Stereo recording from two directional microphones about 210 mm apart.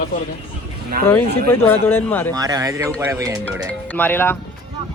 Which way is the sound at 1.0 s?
10° left (ahead or behind).